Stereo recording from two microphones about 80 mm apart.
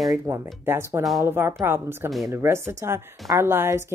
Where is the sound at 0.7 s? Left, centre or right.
Right.